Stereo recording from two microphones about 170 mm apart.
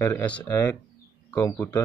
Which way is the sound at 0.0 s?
10° left (ahead or behind).